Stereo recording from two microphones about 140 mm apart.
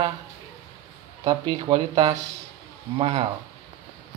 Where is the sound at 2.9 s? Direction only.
45° right (ahead or behind).